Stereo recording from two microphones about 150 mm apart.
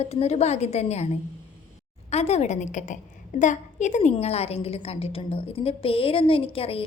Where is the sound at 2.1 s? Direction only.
45° left (ahead or behind).